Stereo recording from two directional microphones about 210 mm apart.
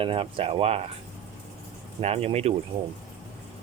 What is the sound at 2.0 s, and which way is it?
Speech, 30° right (ahead or behind).